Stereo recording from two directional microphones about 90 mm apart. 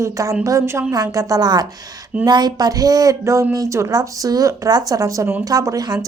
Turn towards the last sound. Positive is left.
turn(degrees=-45)  # may be behind; listen again after turning